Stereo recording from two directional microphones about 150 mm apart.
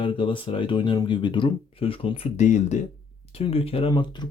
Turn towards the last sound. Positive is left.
turn(degrees=30)  # may be behind; listen again after turning